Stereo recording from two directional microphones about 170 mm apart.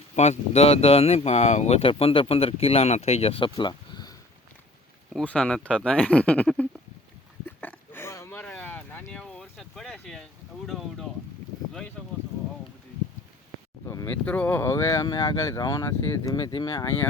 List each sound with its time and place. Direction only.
0.2 s speech: 40° left (ahead or behind)
5.1 s speech: 5° left (ahead or behind)
7.4 s a sound: 10° left (ahead or behind)
10.7 s speech: centre (ahead or behind)
13.8 s speech: 15° left (ahead or behind)